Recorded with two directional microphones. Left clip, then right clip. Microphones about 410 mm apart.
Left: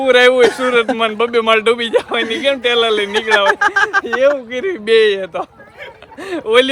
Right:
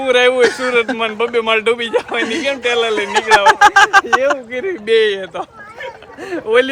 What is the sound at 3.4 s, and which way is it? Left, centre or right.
Speech, centre.